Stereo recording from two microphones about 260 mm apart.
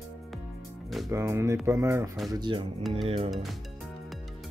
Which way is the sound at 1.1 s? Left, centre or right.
Centre.